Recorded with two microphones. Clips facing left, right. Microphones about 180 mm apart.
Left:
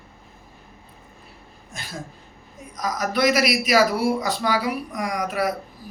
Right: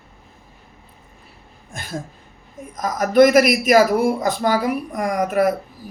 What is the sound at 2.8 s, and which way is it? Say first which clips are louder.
Speech: right 9 dB; 50° right (ahead or behind).